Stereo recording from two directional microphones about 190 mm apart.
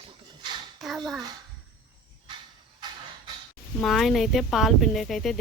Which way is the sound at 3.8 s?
Centre (ahead or behind).